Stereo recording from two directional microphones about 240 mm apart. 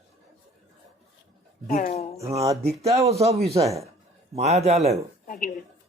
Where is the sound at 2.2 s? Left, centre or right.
Right.